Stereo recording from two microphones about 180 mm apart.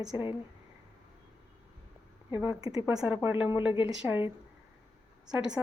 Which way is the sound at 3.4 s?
10° right (ahead or behind).